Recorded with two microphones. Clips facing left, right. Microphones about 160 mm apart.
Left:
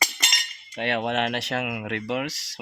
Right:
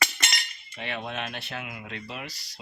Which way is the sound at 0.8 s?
70° left (ahead or behind).